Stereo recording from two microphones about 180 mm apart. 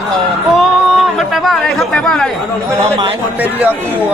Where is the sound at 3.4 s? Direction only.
10° right (ahead or behind).